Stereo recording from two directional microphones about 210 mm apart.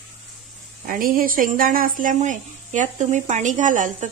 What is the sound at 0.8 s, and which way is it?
Speech, 40° right (ahead or behind).